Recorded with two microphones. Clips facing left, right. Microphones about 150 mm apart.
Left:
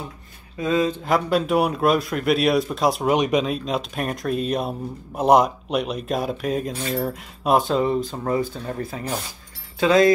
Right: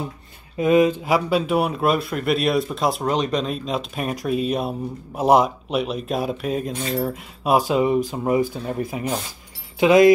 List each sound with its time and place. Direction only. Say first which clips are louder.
0.6 s speech: right 5 dB; 15° right (ahead or behind); by 3.1 s centre (ahead or behind)
3.1 s speech: left 2 dB; 10° left (ahead or behind); by 10.1 s 15° right (ahead or behind)